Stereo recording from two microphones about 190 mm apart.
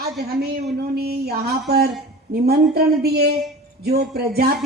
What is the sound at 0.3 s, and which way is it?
Speech, 55° right (ahead or behind).